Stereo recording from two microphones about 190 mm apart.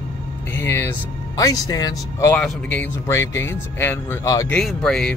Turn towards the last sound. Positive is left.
turn(degrees=5)  # may be behind; listen again after turning